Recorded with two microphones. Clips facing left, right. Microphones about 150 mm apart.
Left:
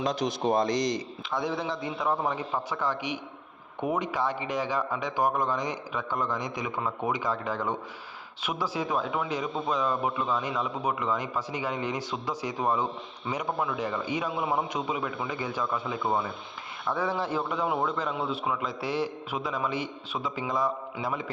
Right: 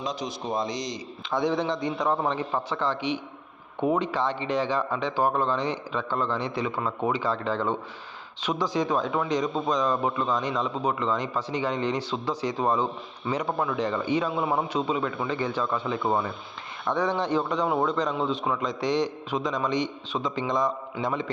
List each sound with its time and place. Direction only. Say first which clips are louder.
0.0 s a man's voice: left 4 dB; 55° left (ahead or behind)
1.3 s a man's voice: right 5 dB; centre (ahead or behind)
14.3 s a man's voice: right 3 dB; 30° right (ahead or behind)
14.8 s a man's voice: right 4 dB; 10° left (ahead or behind)